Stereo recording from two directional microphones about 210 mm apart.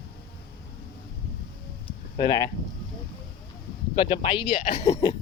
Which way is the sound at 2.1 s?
20° left (ahead or behind).